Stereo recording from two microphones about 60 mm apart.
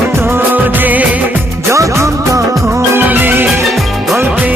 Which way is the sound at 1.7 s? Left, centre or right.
Right.